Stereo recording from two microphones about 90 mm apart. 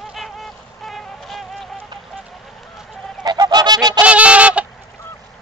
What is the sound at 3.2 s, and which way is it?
Goose, 50° right (ahead or behind).